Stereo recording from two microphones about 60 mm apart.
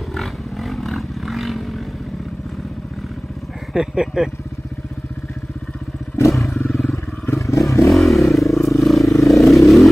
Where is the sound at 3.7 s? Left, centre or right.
Centre.